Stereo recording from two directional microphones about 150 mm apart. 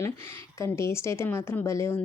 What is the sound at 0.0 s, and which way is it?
Speech, 15° left (ahead or behind).